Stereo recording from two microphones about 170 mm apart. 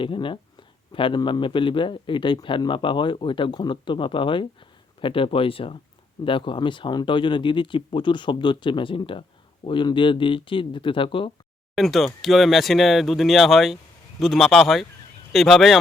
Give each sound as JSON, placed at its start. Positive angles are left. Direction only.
{"t": 0.0, "sound": "a man's voice", "side_deg": 30}
{"t": 11.7, "sound": "speech", "side_deg": 0}